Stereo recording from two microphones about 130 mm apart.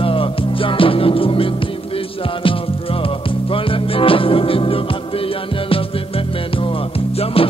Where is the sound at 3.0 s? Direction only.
45° left (ahead or behind).